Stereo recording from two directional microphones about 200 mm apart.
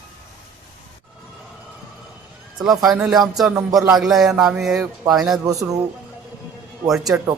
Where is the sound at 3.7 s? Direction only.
20° right (ahead or behind).